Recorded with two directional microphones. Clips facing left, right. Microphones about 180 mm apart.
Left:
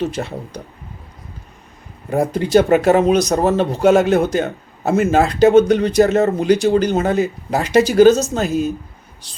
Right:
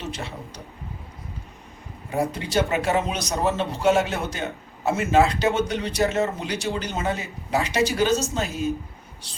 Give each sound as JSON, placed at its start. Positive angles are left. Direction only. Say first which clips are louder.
{"t": 0.2, "sound": "speech", "louder": "left 9 dB", "side_deg": 50}
{"t": 2.0, "sound": "speech", "louder": "left 8 dB", "side_deg": 55}
{"t": 3.3, "sound": "speech", "louder": "left 8 dB", "side_deg": 40}